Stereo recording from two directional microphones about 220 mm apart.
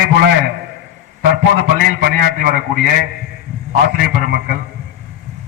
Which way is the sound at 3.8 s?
45° right (ahead or behind).